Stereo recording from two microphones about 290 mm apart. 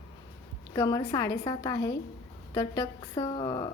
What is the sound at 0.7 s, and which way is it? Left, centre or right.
A woman's voice, centre.